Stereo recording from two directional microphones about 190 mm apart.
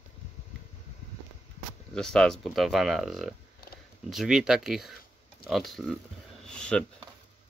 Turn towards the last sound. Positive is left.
turn(degrees=5)  # may be behind; listen again after turning